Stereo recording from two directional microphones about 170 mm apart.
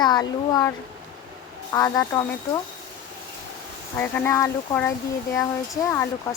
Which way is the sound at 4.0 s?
10° left (ahead or behind).